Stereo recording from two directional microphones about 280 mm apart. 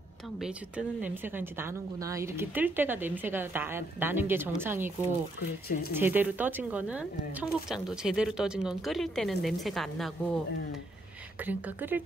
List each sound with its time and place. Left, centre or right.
0.4 s speech: centre
5.7 s speech: left
5.9 s speech: centre
11.4 s speech: centre